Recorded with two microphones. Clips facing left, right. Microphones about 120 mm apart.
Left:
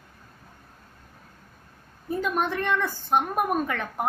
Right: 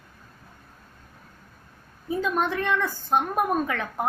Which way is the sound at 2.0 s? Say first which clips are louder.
Right 1 dB; centre (ahead or behind).